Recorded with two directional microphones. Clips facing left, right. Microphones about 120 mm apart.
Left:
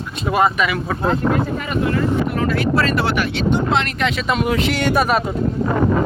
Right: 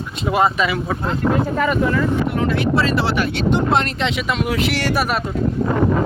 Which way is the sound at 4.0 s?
20° right (ahead or behind).